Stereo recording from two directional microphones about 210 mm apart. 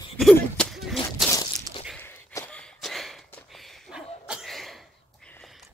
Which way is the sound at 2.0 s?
10° left (ahead or behind).